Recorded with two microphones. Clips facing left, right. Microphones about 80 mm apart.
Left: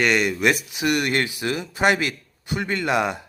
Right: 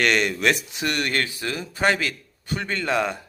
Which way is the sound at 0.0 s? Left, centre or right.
Centre.